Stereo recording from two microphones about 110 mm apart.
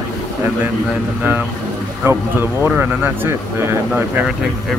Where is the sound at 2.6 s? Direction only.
20° right (ahead or behind).